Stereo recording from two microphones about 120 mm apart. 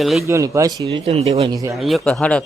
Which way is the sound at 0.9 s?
60° right (ahead or behind).